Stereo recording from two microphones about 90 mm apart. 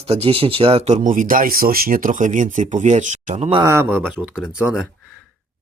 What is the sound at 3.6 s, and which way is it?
Speech, 30° right (ahead or behind).